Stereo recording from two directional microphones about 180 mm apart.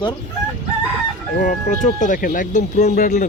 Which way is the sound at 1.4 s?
45° left (ahead or behind).